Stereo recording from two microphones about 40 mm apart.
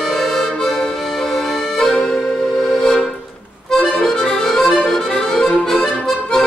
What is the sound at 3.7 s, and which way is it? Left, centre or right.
Accordion, centre.